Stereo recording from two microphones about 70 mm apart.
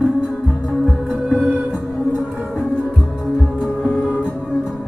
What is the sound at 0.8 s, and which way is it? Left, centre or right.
Music, centre.